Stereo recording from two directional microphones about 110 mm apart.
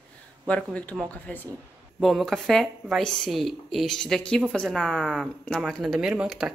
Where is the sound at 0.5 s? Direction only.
10° left (ahead or behind).